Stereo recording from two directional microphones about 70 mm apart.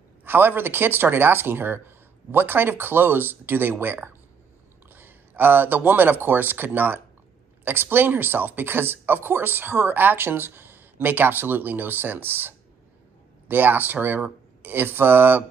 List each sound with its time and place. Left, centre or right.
0.2 s speech: right